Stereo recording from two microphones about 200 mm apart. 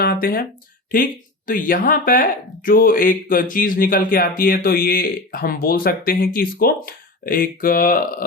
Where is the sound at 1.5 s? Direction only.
45° left (ahead or behind).